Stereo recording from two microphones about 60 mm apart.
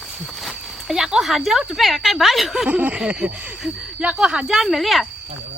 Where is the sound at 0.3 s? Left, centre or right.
Centre.